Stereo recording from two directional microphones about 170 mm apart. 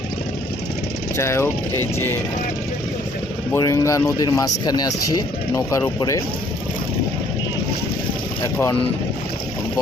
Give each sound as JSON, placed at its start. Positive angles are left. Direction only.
{"t": 1.1, "sound": "speech", "side_deg": 15}
{"t": 3.5, "sound": "speech", "side_deg": 20}